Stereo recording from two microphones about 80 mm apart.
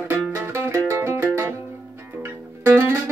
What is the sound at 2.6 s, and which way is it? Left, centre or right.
Music, right.